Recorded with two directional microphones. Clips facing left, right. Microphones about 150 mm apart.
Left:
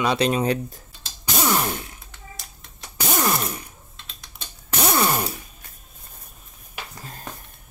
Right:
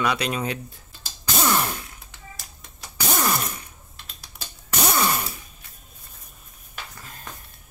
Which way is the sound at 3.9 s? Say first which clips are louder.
Even; 5° right (ahead or behind).